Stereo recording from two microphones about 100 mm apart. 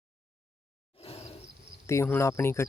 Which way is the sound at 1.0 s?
75° left (ahead or behind).